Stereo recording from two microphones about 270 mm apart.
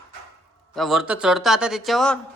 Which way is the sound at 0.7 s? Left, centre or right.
Centre.